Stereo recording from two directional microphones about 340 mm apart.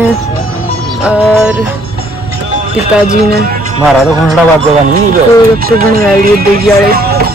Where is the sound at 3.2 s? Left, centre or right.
Right.